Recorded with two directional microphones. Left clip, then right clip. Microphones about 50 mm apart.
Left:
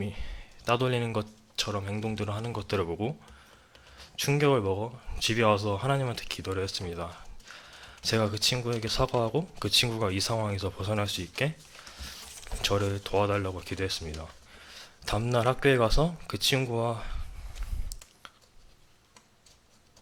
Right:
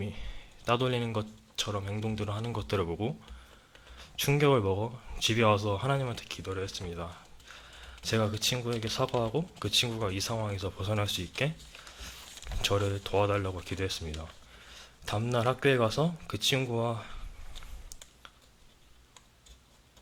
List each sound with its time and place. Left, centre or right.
0.0 s speech: centre
6.2 s speech: left
7.2 s a sound: centre
8.8 s speech: centre
10.7 s speech: centre